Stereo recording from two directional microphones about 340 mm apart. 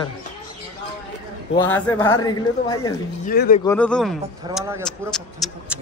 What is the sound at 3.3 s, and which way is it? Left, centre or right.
Speech, left.